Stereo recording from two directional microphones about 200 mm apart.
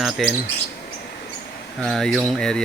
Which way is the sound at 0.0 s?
Centre (ahead or behind).